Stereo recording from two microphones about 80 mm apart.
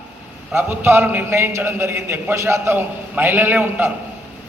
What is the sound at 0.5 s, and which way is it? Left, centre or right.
A man's voice, right.